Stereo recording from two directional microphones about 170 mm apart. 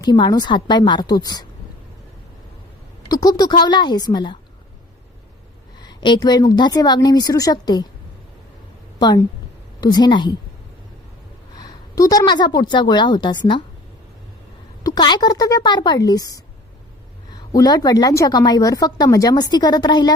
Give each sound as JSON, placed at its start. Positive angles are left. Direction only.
{"t": 0.0, "sound": "speech", "side_deg": 25}
{"t": 3.1, "sound": "speech", "side_deg": 20}
{"t": 5.8, "sound": "a woman's voice", "side_deg": 25}
{"t": 9.0, "sound": "a woman's voice", "side_deg": 25}
{"t": 11.5, "sound": "a woman's voice", "side_deg": 20}
{"t": 14.8, "sound": "speech", "side_deg": 25}
{"t": 17.5, "sound": "speech", "side_deg": 20}